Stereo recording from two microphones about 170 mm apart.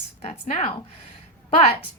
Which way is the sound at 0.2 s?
35° left (ahead or behind).